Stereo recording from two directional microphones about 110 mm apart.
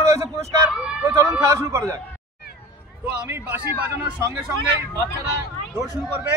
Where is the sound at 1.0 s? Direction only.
25° right (ahead or behind).